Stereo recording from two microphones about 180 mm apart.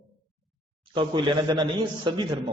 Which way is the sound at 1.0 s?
25° right (ahead or behind).